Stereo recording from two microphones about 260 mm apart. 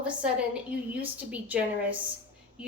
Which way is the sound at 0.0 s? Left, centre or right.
Centre.